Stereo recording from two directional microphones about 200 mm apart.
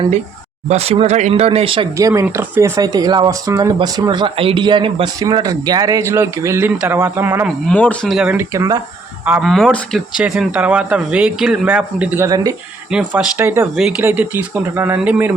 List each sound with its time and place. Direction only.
0.7 s speech: 30° right (ahead or behind)
2.0 s speech: 15° right (ahead or behind)
7.7 s speech: 5° left (ahead or behind); by 8.8 s 15° right (ahead or behind)
9.2 s speech: 5° right (ahead or behind)
12.9 s speech: 5° right (ahead or behind)